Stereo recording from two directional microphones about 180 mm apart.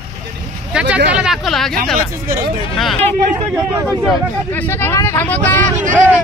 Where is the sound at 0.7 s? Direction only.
10° right (ahead or behind).